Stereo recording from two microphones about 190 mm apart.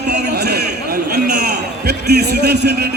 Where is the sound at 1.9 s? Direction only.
60° right (ahead or behind).